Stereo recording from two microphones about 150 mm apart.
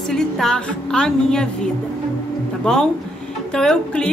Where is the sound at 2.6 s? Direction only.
5° left (ahead or behind).